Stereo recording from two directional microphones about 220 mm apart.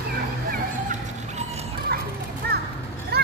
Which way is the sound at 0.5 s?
35° right (ahead or behind).